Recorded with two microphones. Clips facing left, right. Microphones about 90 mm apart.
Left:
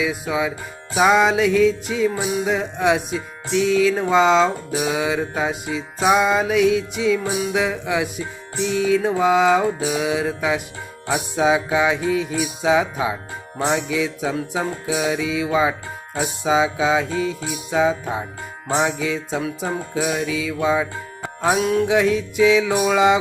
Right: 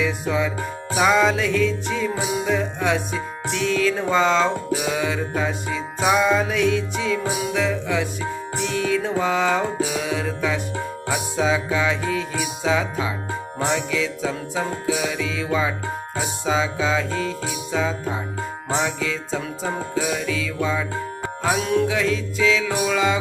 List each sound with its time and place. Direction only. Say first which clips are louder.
0.0 s music: even; 10° left (ahead or behind); by 18.9 s 25° left (ahead or behind)
18.9 s music: left 2 dB; 15° left (ahead or behind)
21.6 s music: even; 5° left (ahead or behind)
21.8 s music: left 4 dB; 20° left (ahead or behind)